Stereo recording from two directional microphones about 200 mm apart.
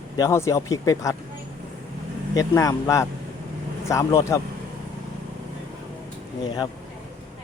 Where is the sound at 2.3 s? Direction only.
15° left (ahead or behind).